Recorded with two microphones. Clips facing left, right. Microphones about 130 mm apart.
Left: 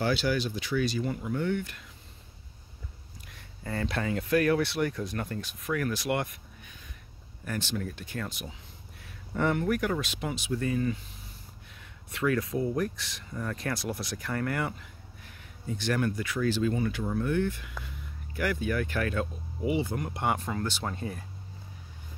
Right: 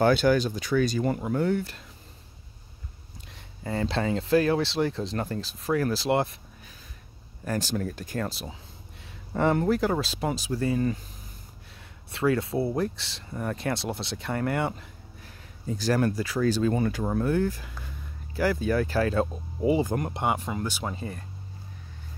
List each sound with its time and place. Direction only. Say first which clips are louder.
0.0 s speech: right 7 dB; 50° right (ahead or behind); by 1.9 s 35° right (ahead or behind)
3.3 s speech: right 4 dB; 20° right (ahead or behind); by 20.1 s 45° right (ahead or behind)
20.2 s speech: even; 15° right (ahead or behind); by 21.3 s centre (ahead or behind)